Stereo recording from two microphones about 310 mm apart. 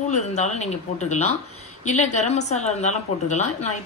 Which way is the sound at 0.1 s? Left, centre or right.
Left.